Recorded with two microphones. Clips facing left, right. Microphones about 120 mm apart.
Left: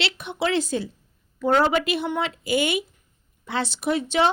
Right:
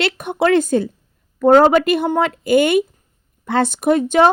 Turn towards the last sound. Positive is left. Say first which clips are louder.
# right 8 dB
turn(degrees=-50)  # may be behind; listen again after turning